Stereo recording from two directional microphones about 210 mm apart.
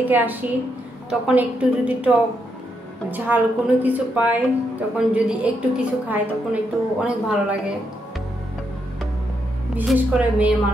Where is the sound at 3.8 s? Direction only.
10° right (ahead or behind).